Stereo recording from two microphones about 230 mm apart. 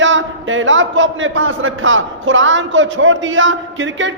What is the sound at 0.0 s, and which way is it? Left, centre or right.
A man's voice, right.